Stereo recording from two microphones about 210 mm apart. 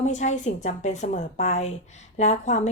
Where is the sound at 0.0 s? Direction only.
35° left (ahead or behind).